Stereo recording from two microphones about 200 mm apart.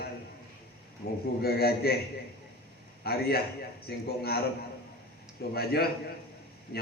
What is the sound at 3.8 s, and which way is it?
Mantra, 50° left (ahead or behind).